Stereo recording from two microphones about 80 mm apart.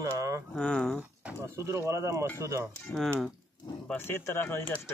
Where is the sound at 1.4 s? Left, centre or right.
Right.